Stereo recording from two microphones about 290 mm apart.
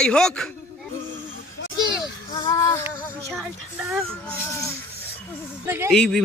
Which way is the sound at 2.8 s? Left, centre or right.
Centre.